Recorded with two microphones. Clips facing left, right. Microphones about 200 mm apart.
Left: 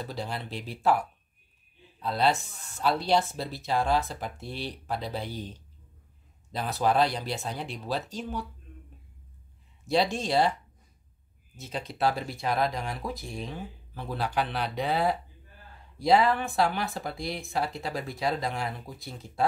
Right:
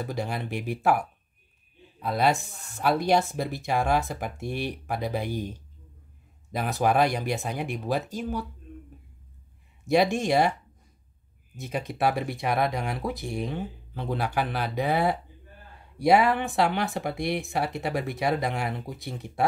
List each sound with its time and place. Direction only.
0.0 s speech: 15° right (ahead or behind)
9.9 s speech: 15° right (ahead or behind)
11.9 s speech: 15° right (ahead or behind)
13.2 s speech: 65° right (ahead or behind)
13.9 s speech: 15° right (ahead or behind)
16.1 s speech: 15° right (ahead or behind)
16.7 s speech: 70° right (ahead or behind)
18.3 s speech: 15° right (ahead or behind)
18.9 s speech: 65° right (ahead or behind)